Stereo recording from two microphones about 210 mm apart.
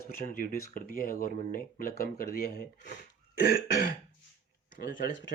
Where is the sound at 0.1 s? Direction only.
40° left (ahead or behind).